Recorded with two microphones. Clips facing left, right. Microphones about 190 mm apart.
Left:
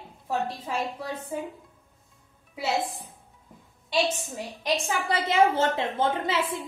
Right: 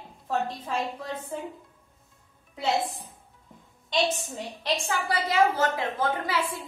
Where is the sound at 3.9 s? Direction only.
5° left (ahead or behind).